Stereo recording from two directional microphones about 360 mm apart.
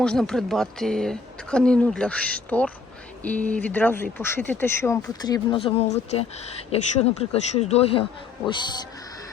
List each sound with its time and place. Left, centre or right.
0.0 s speech: centre